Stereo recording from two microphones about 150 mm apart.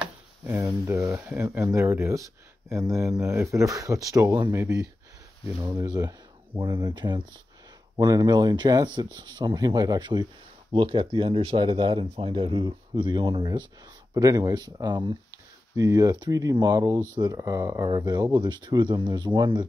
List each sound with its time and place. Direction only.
0.0 s speech: 10° right (ahead or behind); by 19.6 s 30° right (ahead or behind)